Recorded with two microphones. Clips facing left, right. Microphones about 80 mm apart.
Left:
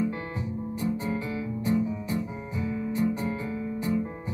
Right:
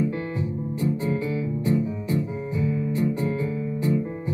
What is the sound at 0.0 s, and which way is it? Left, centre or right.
Music, left.